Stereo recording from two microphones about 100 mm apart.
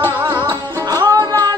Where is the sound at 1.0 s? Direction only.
45° right (ahead or behind).